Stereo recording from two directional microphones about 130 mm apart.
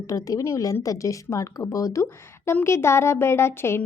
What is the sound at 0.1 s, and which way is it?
A woman's voice, 25° left (ahead or behind).